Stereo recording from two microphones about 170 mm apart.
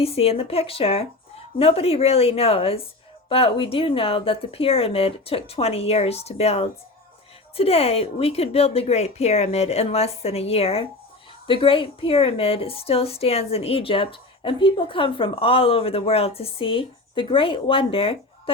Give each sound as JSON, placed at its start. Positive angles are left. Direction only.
{"t": 0.0, "sound": "a woman's voice", "side_deg": 35}